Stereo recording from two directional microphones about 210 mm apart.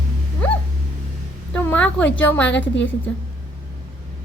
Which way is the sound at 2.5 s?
60° left (ahead or behind).